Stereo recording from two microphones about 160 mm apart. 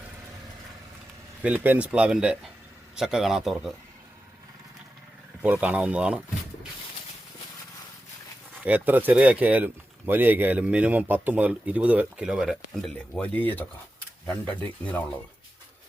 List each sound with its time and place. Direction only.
1.4 s a man's voice: 10° right (ahead or behind)
5.4 s speech: 10° right (ahead or behind)
8.6 s speech: 10° right (ahead or behind); by 15.0 s 10° left (ahead or behind)